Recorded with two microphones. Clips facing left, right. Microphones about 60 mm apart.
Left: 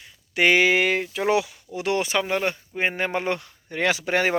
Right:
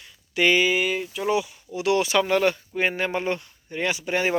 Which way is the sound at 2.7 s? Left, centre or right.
Left.